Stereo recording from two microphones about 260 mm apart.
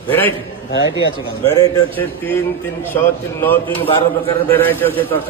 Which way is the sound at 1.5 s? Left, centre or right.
Centre.